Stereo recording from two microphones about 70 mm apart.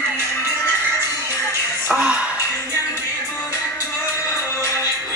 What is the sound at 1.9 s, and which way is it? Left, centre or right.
Music, centre.